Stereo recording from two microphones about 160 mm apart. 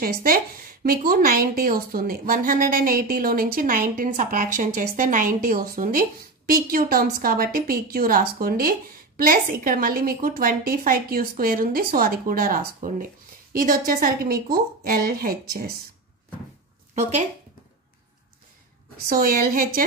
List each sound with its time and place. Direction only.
0.0 s a woman's voice: 65° right (ahead or behind)
16.9 s speech: 45° right (ahead or behind)
19.0 s speech: 65° right (ahead or behind)